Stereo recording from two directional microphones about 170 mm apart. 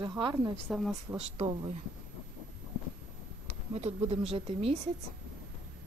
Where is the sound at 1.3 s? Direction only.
30° right (ahead or behind).